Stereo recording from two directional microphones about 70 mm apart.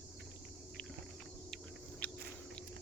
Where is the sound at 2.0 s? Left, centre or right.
Centre.